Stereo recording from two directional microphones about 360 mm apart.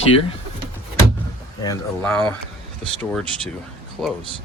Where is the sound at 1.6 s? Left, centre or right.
Centre.